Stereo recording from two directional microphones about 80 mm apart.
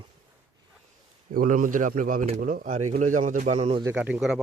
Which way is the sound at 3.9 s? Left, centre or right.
Right.